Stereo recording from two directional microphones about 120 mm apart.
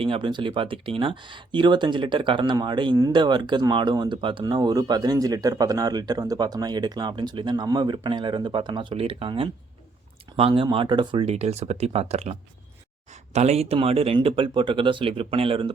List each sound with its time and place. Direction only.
0.0 s speech: 45° right (ahead or behind)
11.3 s speech: 60° right (ahead or behind)